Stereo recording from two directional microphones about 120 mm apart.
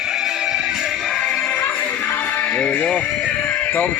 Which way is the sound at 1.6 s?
15° left (ahead or behind).